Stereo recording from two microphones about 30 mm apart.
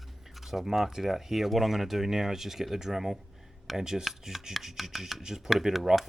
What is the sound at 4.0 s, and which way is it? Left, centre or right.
Speech, centre.